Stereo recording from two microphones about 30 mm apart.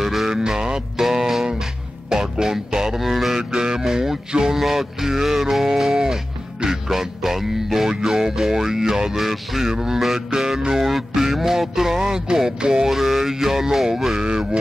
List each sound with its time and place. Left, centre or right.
0.0 s music: centre
0.3 s music: right
0.9 s music: centre
3.3 s music: right
9.2 s music: centre
9.6 s music: centre
9.9 s music: centre
12.0 s music: right
12.8 s music: centre
14.2 s a sound: right